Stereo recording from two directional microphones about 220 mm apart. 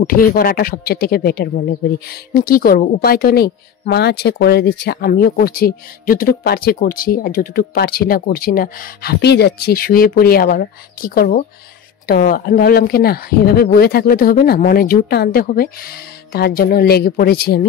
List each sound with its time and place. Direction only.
0.0 s speech: 40° left (ahead or behind)